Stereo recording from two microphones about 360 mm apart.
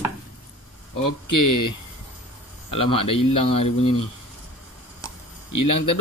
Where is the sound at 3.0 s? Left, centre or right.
Left.